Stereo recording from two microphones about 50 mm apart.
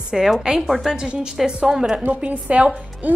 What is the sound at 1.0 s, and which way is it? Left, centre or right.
Speech, right.